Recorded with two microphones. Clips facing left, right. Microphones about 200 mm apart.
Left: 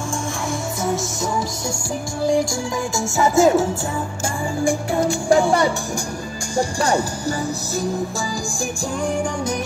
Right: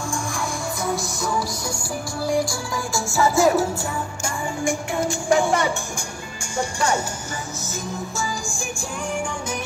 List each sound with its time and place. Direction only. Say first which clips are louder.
2.9 s music: even; 20° left (ahead or behind)
4.6 s music: left 4 dB; 35° left (ahead or behind)